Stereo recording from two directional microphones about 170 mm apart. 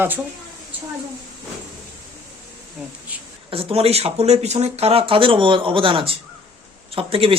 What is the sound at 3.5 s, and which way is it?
Speech, 35° right (ahead or behind).